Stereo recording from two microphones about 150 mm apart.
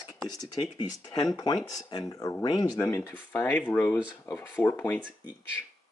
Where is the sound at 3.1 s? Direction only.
15° left (ahead or behind).